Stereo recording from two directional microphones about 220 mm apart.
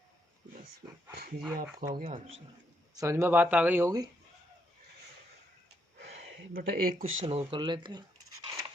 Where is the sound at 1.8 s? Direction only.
40° right (ahead or behind).